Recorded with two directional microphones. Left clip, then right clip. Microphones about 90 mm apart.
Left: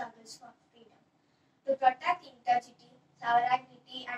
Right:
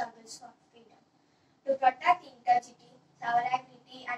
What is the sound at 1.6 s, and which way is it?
A woman's voice, 30° left (ahead or behind).